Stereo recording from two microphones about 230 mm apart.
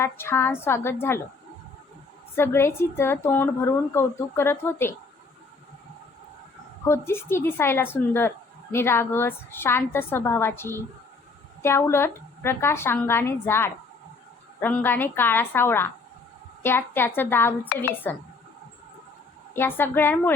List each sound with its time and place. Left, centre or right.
0.0 s speech: centre
2.3 s speech: centre
6.8 s speech: centre
19.5 s speech: centre